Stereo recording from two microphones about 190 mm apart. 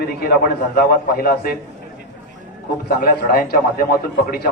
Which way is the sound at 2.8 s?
50° left (ahead or behind).